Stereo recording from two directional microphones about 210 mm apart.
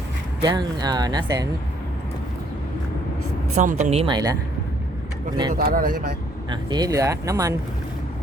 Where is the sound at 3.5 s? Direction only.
35° right (ahead or behind).